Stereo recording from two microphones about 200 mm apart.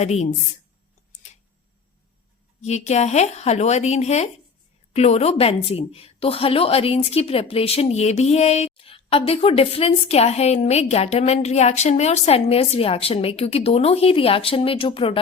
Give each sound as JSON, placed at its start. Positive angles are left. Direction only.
{"t": 0.0, "sound": "speech", "side_deg": 35}
{"t": 2.6, "sound": "a woman's voice", "side_deg": 35}